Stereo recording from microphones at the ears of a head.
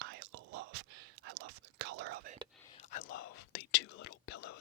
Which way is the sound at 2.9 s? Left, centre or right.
Left.